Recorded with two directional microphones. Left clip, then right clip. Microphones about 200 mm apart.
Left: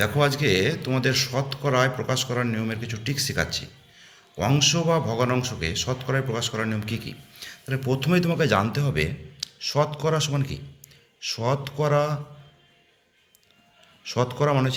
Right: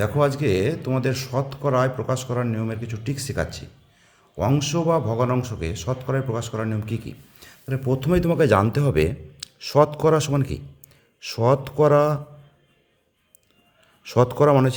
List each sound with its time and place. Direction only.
0.0 s a man's voice: 40° right (ahead or behind)
14.0 s a man's voice: 55° right (ahead or behind)